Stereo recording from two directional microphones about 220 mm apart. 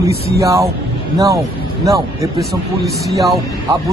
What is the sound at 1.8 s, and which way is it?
Speech, 15° right (ahead or behind).